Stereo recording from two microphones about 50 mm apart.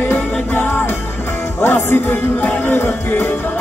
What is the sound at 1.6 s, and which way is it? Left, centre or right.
Music, left.